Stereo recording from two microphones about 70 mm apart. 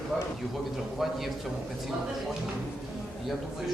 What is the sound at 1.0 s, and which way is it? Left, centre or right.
Speech, centre.